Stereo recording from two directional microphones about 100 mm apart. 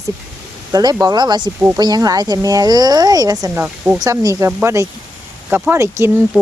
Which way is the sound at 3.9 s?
35° right (ahead or behind).